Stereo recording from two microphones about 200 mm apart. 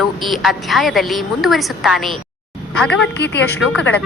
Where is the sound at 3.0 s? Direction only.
60° left (ahead or behind).